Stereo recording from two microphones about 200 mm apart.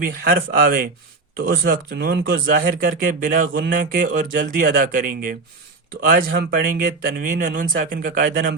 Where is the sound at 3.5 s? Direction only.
45° right (ahead or behind).